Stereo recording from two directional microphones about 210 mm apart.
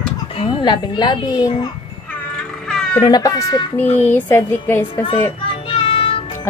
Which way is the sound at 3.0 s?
20° left (ahead or behind).